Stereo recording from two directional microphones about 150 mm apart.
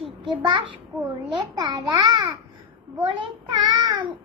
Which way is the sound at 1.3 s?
30° right (ahead or behind).